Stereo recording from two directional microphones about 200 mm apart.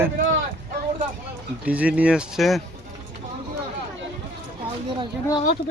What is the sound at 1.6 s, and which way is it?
Speech, 5° right (ahead or behind).